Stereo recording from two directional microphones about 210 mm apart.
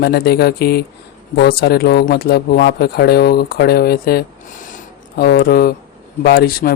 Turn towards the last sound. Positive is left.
turn(degrees=45)  # may be behind; listen again after turning